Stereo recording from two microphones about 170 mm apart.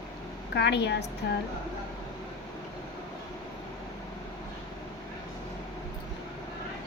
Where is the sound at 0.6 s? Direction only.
90° left.